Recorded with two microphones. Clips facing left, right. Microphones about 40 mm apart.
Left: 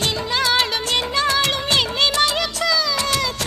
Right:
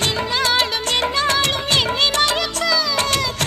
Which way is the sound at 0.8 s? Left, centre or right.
Right.